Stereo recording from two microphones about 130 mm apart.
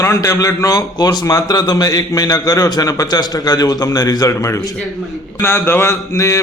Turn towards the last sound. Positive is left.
turn(degrees=25)  # may be behind; listen again after turning